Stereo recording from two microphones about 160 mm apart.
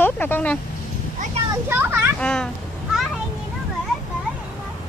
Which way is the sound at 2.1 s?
5° left (ahead or behind).